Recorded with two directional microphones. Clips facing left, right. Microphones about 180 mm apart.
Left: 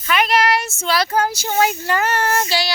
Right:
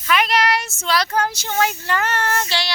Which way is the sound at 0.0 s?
Centre (ahead or behind).